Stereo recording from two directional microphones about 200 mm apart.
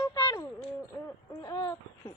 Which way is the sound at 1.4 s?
20° left (ahead or behind).